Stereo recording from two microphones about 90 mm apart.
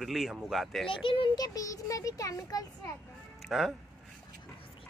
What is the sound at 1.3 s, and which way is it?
Speech, 45° left (ahead or behind).